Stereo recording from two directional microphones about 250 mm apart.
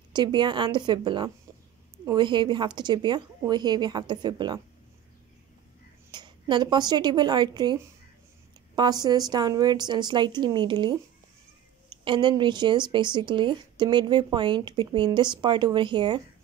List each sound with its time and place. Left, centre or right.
0.1 s a woman's voice: centre
6.1 s a woman's voice: centre
8.7 s a woman's voice: centre